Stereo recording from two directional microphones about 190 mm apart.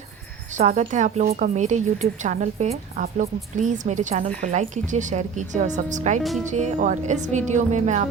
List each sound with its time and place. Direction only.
0.5 s a woman's voice: 40° right (ahead or behind)